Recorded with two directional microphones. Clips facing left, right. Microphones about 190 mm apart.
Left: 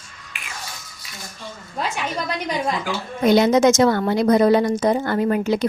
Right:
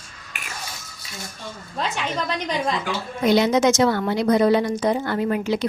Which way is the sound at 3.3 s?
50° left (ahead or behind).